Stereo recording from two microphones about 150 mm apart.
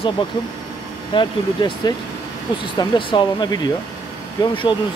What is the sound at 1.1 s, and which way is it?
Speech, 30° left (ahead or behind).